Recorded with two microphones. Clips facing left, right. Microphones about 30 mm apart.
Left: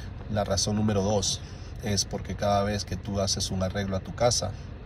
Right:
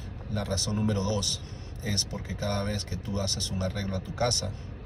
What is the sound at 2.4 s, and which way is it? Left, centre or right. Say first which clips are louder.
A man's voice: left 7 dB; left.